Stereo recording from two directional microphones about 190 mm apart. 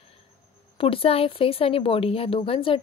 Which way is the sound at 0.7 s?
30° left (ahead or behind).